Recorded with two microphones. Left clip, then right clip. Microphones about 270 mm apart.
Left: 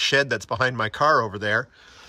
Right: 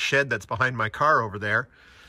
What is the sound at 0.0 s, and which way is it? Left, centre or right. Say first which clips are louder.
Speech: left 2 dB; centre.